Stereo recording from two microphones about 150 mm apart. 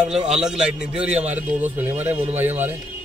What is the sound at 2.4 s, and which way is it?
Speech, 15° right (ahead or behind).